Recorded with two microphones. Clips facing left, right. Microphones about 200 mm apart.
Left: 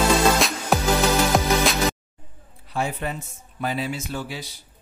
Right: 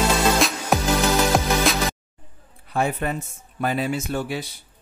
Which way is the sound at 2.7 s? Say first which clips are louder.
Right 3 dB; 55° right (ahead or behind).